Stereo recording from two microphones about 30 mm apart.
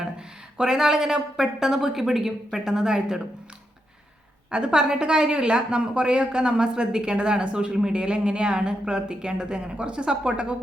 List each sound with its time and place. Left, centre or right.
0.6 s speech: centre
4.5 s speech: right